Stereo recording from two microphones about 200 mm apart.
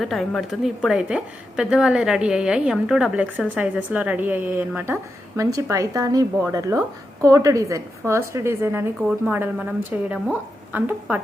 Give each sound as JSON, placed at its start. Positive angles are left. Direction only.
{"t": 0.0, "sound": "a woman's voice", "side_deg": 0}